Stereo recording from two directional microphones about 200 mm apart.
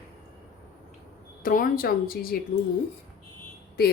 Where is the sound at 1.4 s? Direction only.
45° left (ahead or behind).